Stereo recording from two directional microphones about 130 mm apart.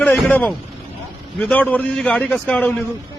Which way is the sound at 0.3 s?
10° left (ahead or behind).